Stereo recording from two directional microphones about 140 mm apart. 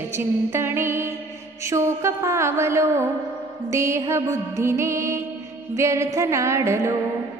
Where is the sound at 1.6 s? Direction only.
20° right (ahead or behind).